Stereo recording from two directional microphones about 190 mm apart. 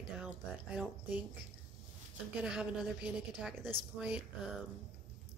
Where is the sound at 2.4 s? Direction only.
5° right (ahead or behind).